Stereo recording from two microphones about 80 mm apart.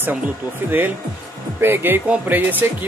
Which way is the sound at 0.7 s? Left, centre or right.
Right.